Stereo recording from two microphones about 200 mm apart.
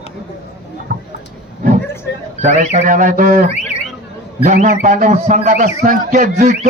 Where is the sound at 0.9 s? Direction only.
45° right (ahead or behind).